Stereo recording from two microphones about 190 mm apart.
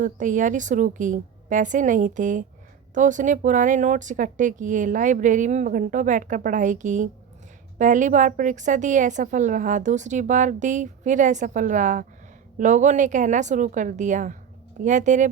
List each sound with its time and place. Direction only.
0.0 s a woman's voice: 45° right (ahead or behind)